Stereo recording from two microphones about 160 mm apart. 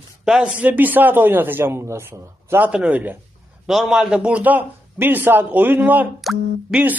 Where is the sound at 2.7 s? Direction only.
5° right (ahead or behind).